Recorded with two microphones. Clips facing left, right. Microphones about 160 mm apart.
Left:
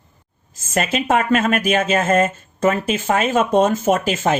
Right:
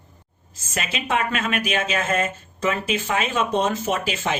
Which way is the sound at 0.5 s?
50° left (ahead or behind).